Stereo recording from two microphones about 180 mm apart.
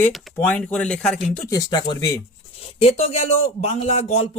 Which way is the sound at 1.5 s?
20° left (ahead or behind).